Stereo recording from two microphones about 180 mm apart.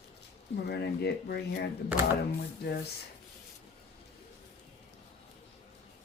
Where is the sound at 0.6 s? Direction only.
65° left (ahead or behind).